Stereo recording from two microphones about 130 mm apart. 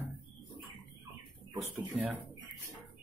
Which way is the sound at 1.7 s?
15° right (ahead or behind).